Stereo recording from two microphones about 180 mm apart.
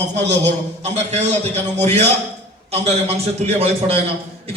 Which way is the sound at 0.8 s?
40° right (ahead or behind).